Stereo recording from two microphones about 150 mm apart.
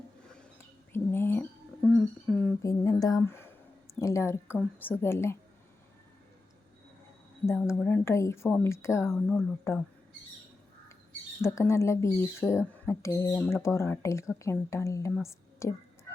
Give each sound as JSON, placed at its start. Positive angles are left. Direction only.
{"t": 0.9, "sound": "a sound", "side_deg": 15}
{"t": 2.6, "sound": "speech", "side_deg": 25}
{"t": 7.7, "sound": "speech", "side_deg": 15}
{"t": 11.4, "sound": "a woman's voice", "side_deg": 20}